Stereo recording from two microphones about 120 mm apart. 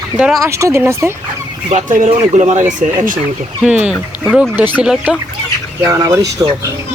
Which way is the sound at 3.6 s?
10° right (ahead or behind).